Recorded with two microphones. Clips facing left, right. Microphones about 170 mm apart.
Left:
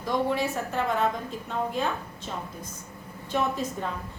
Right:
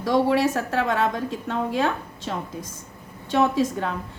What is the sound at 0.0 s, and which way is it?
A woman's voice, 80° right.